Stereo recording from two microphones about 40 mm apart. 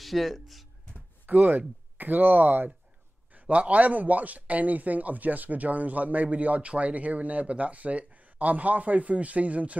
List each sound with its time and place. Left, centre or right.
0.0 s speech: centre
1.2 s speech: right
3.3 s speech: right